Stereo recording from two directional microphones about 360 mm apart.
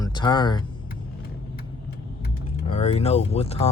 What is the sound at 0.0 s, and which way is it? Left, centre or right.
Speech, centre.